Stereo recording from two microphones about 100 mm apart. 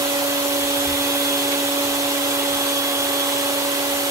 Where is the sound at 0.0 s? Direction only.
30° right (ahead or behind).